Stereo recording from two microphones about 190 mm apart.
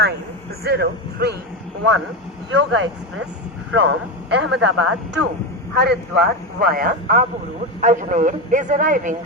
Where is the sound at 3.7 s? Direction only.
80° right.